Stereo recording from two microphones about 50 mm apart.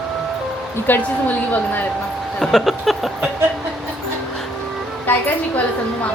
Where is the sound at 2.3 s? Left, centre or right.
Centre.